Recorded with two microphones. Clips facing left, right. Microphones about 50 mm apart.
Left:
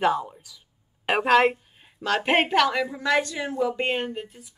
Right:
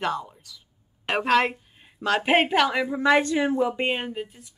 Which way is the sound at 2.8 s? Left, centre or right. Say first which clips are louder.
Right 4 dB; right.